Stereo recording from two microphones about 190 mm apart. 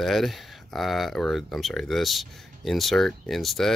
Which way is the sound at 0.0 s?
Centre (ahead or behind).